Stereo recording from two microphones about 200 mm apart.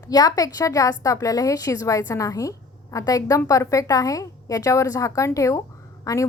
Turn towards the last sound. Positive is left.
turn(degrees=15)  # may be behind; listen again after turning